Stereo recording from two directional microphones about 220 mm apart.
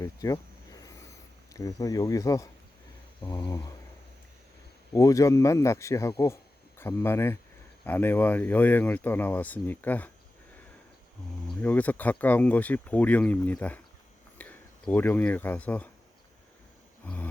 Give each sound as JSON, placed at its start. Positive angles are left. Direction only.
{"t": 0.0, "sound": "a sound", "side_deg": 15}
{"t": 1.5, "sound": "speech", "side_deg": 15}
{"t": 3.2, "sound": "a sound", "side_deg": 20}
{"t": 4.9, "sound": "speech", "side_deg": 15}
{"t": 11.6, "sound": "speech", "side_deg": 5}
{"t": 17.0, "sound": "speech", "side_deg": 5}